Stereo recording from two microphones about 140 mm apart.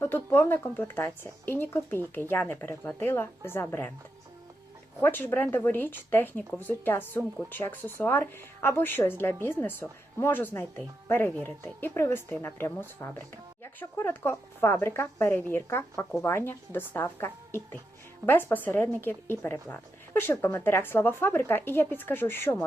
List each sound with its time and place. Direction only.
0.0 s speech: 15° left (ahead or behind)
4.9 s speech: 15° left (ahead or behind)